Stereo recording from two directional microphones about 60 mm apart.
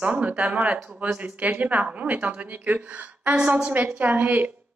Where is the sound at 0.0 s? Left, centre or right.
Right.